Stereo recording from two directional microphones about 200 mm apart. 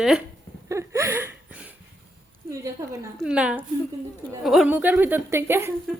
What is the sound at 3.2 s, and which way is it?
A woman's voice, 5° right (ahead or behind).